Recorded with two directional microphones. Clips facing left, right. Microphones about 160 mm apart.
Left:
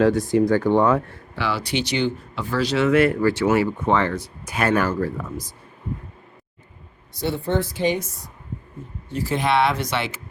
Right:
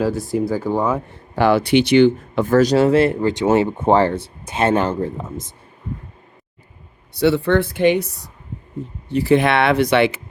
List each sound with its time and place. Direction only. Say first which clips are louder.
0.0 s speech: left 2 dB; 5° right (ahead or behind)
1.4 s speech: right 10 dB; 50° right (ahead or behind); by 5.5 s 25° right (ahead or behind)
7.1 s speech: right 8 dB; 75° right (ahead or behind)